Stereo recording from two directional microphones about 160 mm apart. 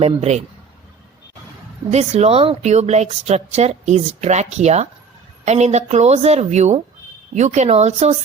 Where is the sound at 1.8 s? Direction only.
45° right (ahead or behind).